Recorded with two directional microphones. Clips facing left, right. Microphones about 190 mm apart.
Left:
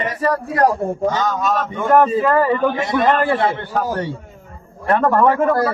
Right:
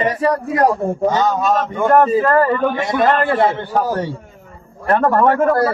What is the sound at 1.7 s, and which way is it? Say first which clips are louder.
A man's voice: right 1 dB; centre (ahead or behind).